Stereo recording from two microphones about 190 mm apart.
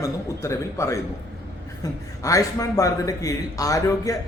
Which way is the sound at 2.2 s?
15° left (ahead or behind).